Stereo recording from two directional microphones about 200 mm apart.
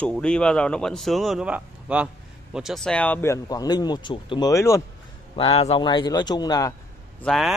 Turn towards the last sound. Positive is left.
turn(degrees=0)  # may be behind; listen again after turning